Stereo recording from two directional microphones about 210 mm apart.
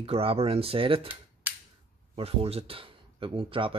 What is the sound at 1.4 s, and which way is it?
Cap gun, 10° right (ahead or behind).